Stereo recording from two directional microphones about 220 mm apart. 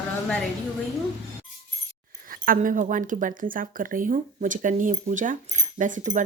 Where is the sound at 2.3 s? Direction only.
40° right (ahead or behind).